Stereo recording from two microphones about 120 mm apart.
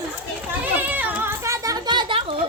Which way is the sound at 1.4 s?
25° right (ahead or behind).